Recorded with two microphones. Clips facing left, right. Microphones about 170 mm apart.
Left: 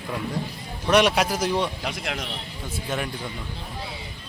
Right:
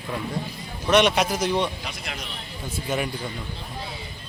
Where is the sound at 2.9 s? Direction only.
Centre (ahead or behind).